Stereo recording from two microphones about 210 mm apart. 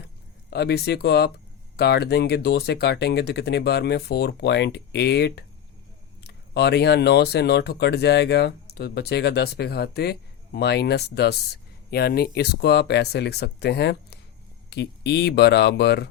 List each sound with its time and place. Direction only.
0.5 s speech: 50° left (ahead or behind)